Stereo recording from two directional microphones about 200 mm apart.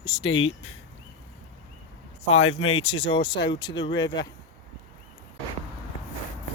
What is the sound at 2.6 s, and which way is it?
Speech, 25° left (ahead or behind).